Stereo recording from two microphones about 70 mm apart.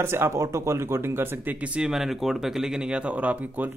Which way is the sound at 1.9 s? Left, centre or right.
Centre.